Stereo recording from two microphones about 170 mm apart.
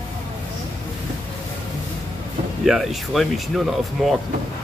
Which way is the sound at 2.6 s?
Centre (ahead or behind).